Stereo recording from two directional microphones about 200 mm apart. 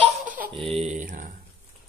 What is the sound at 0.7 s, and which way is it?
Speech, 35° right (ahead or behind).